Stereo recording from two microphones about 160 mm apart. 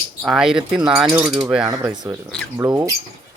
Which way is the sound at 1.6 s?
20° right (ahead or behind).